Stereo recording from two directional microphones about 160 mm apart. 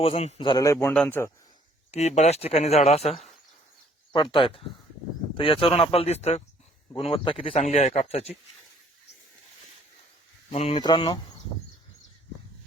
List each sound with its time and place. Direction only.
0.0 s a man's voice: 40° left (ahead or behind); by 1.3 s 10° left (ahead or behind)
1.9 s speech: 45° left (ahead or behind)
6.9 s speech: 30° left (ahead or behind)
10.5 s speech: 40° left (ahead or behind)
10.8 s a man's voice: 30° left (ahead or behind)